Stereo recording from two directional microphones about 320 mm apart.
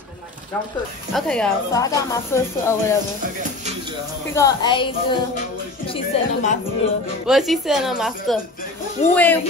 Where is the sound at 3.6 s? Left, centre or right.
Right.